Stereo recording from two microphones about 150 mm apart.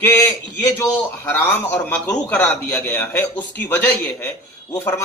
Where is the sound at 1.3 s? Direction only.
10° left (ahead or behind).